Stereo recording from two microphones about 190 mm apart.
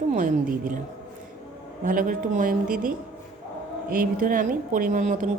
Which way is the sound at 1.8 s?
45° right (ahead or behind).